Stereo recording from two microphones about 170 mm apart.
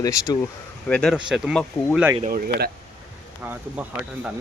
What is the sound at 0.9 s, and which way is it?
Speech, 5° left (ahead or behind).